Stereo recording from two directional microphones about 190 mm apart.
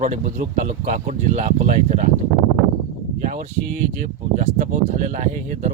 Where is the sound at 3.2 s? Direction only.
40° right (ahead or behind).